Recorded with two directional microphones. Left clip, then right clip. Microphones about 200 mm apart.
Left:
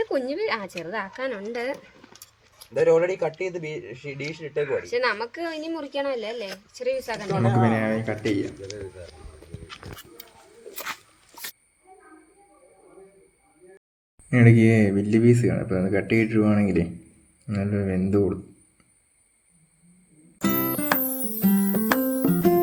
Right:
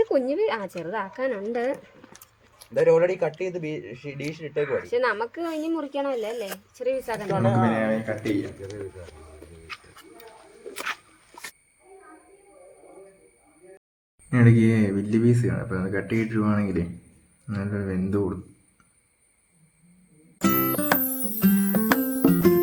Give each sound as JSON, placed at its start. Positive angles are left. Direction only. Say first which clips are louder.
{"t": 0.0, "sound": "speech", "louder": "right 3 dB", "side_deg": -20}
{"t": 2.7, "sound": "speech", "louder": "even", "side_deg": 20}
{"t": 4.6, "sound": "speech", "louder": "even", "side_deg": -15}
{"t": 7.3, "sound": "speech", "louder": "even", "side_deg": 25}
{"t": 14.3, "sound": "speech", "louder": "left 3 dB", "side_deg": 15}
{"t": 20.4, "sound": "music", "louder": "right 2 dB", "side_deg": 0}